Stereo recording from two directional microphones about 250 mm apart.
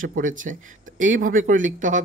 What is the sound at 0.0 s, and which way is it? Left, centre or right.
Speech, right.